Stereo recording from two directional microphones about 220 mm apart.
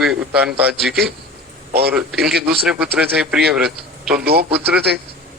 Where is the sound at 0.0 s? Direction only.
5° right (ahead or behind).